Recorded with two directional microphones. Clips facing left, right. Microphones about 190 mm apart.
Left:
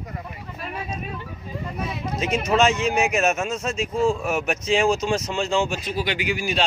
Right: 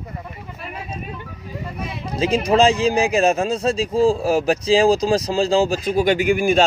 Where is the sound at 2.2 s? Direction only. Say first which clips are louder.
Right 5 dB; 30° right (ahead or behind); by 6.6 s 50° right (ahead or behind).